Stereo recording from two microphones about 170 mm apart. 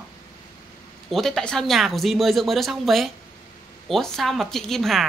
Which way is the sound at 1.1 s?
5° left (ahead or behind).